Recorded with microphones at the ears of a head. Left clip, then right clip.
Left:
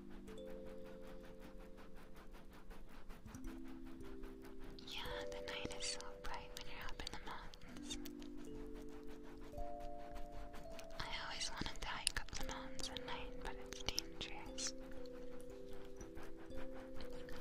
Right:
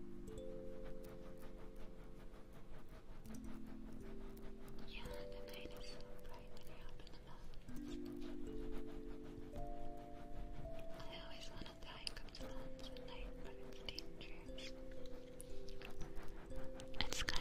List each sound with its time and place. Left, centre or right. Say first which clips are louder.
4.9 s whispering: left 6 dB; left
11.0 s whispering: left 8 dB; left
17.0 s whispering: right 9 dB; right